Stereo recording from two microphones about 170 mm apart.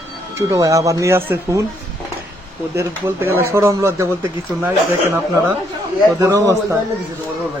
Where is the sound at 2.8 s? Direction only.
15° right (ahead or behind).